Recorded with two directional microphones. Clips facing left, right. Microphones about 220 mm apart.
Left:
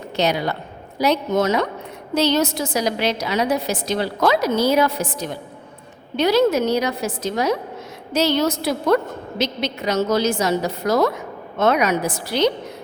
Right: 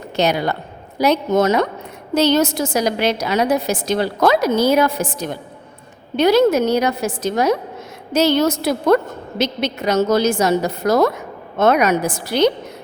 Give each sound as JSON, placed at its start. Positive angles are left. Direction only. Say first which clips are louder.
{"t": 0.2, "sound": "a woman's voice", "louder": "right 3 dB", "side_deg": -50}